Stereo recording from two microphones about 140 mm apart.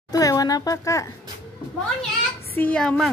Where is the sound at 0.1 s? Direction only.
25° left (ahead or behind).